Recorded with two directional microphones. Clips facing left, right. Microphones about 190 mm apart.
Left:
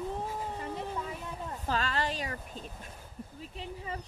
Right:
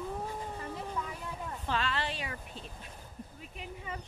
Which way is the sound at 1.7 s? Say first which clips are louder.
Left 2 dB; 40° left (ahead or behind).